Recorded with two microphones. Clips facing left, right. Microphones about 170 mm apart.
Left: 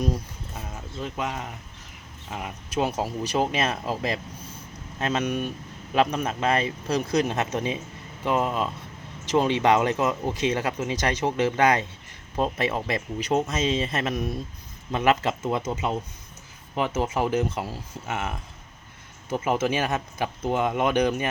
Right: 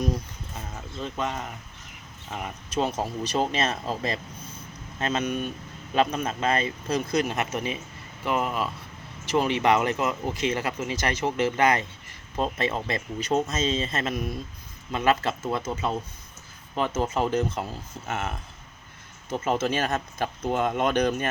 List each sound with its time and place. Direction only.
1.0 s speech: 10° left (ahead or behind)